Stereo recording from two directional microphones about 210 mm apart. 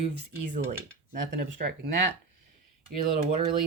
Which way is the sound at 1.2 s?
55° right (ahead or behind).